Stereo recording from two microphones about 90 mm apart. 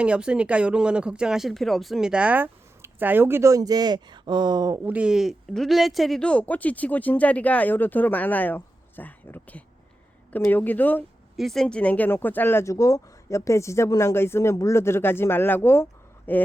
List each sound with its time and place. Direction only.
0.0 s speech: 10° right (ahead or behind); by 3.5 s 25° right (ahead or behind)
3.5 s speech: 45° right (ahead or behind)
4.8 s speech: 15° right (ahead or behind); by 6.2 s centre (ahead or behind)
6.2 s speech: 15° left (ahead or behind)
11.3 s speech: centre (ahead or behind); by 16.4 s 25° left (ahead or behind)